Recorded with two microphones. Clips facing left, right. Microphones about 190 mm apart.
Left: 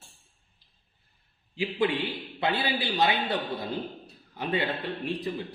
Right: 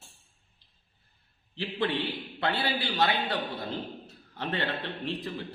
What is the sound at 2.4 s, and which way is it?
A man's voice, 15° left (ahead or behind).